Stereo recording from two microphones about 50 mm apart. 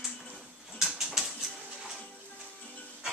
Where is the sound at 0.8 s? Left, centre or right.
Centre.